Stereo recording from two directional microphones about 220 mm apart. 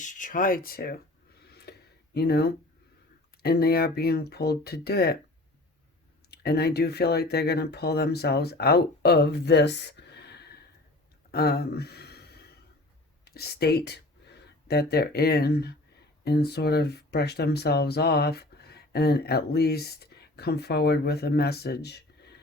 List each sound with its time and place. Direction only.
0.0 s speech: 35° left (ahead or behind)
1.5 s a sound: 45° left (ahead or behind)
3.4 s speech: 45° left (ahead or behind)
6.3 s speech: 45° left (ahead or behind)
11.3 s a sound: 45° left (ahead or behind)
13.2 s speech: 45° left (ahead or behind)